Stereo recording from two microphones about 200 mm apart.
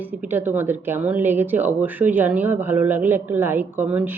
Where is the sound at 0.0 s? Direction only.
10° right (ahead or behind).